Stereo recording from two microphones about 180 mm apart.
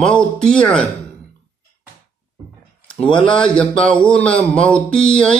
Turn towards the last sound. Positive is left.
turn(degrees=5)  # may be behind; listen again after turning